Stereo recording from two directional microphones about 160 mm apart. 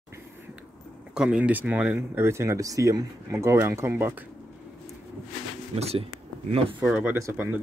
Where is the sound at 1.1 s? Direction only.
5° right (ahead or behind).